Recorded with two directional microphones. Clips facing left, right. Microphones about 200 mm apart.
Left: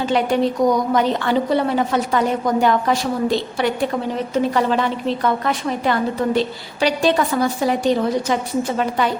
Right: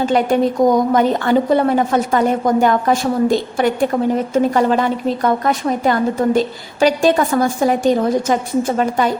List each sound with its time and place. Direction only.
0.0 s a woman's voice: 50° right (ahead or behind)